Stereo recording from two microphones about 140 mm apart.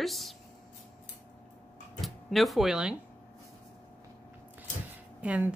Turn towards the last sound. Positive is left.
turn(degrees=-10)  # may be behind; listen again after turning